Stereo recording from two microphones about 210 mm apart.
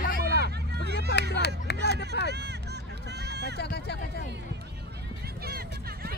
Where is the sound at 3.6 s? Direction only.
50° left (ahead or behind).